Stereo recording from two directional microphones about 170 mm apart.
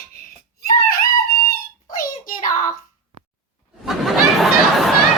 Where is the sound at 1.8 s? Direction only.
55° left (ahead or behind).